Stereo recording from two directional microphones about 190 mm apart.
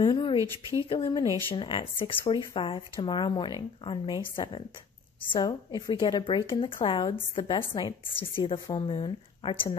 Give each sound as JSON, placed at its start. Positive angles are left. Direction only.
{"t": 0.0, "sound": "a sound", "side_deg": 25}
{"t": 0.4, "sound": "speech", "side_deg": -15}
{"t": 0.8, "sound": "a woman's voice", "side_deg": 25}